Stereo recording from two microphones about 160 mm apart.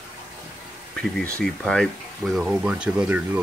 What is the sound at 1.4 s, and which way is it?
Speech, 5° left (ahead or behind).